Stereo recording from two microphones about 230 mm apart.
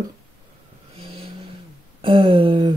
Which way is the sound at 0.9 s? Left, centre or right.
Right.